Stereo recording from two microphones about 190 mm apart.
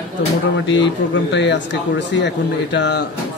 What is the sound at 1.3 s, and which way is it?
Speech, 70° left (ahead or behind).